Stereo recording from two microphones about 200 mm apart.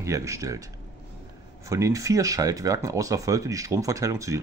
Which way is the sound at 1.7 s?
15° right (ahead or behind).